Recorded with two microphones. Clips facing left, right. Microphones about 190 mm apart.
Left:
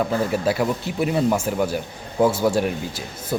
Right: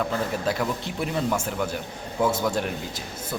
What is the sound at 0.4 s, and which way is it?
Speech, 10° left (ahead or behind).